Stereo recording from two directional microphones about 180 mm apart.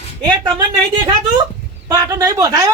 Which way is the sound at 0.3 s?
20° right (ahead or behind).